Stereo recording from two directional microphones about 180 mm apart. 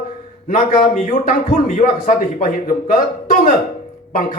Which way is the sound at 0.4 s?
50° left (ahead or behind).